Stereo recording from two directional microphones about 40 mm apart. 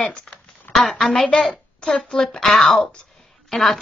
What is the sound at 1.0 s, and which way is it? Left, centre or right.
Speech, centre.